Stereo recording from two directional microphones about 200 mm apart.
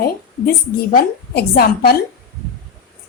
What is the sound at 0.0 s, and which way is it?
A woman's voice, 45° left (ahead or behind).